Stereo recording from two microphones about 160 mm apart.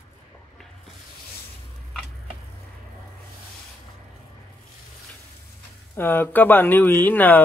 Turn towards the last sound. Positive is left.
turn(degrees=10)  # may be behind; listen again after turning